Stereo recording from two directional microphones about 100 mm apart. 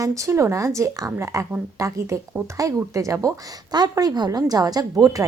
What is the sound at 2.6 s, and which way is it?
Speech, 35° right (ahead or behind).